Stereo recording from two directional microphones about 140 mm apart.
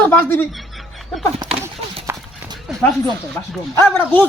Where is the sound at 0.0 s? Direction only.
15° left (ahead or behind).